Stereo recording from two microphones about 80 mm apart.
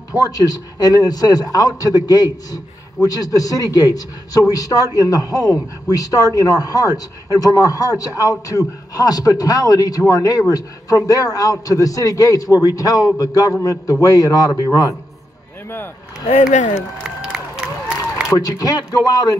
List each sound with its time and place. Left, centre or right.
0.1 s a man's voice: left
16.7 s a sound: centre
18.6 s a man's voice: left